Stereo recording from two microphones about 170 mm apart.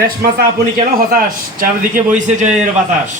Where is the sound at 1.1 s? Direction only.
55° right (ahead or behind).